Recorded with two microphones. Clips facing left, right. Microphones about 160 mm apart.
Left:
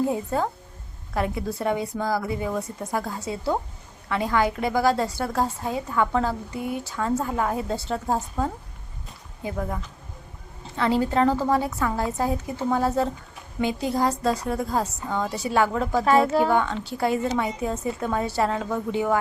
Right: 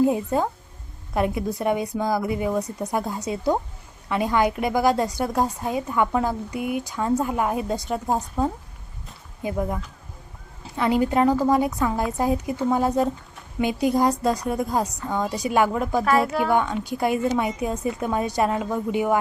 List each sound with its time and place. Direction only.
0.1 s a woman's voice: 15° right (ahead or behind)
16.0 s a woman's voice: 30° left (ahead or behind)
16.5 s a woman's voice: 10° right (ahead or behind)